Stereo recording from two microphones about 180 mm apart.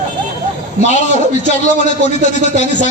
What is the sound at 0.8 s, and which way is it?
A man's voice, 40° left (ahead or behind).